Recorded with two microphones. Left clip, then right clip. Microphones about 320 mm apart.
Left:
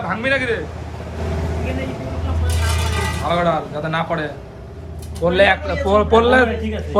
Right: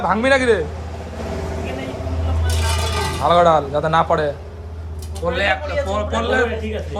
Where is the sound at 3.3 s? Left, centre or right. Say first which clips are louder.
Right 6 dB; centre.